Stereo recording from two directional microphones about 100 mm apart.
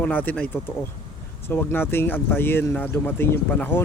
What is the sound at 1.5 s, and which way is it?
Speech, 20° left (ahead or behind).